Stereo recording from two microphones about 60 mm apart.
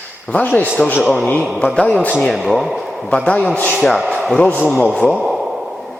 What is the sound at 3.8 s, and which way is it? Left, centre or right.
A man's voice, centre.